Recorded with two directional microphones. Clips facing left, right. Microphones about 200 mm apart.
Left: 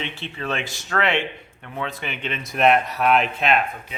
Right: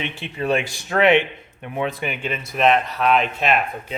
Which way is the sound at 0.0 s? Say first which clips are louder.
Right 4 dB; 15° right (ahead or behind).